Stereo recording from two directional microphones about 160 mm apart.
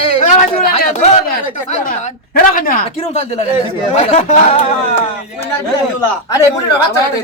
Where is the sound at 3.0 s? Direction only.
40° left (ahead or behind).